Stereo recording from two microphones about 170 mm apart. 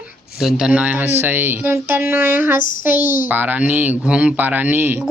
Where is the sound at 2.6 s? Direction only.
50° left (ahead or behind).